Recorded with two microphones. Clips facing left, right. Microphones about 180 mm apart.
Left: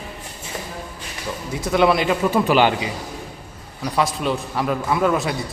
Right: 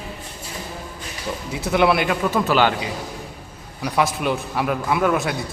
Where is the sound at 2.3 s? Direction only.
10° left (ahead or behind).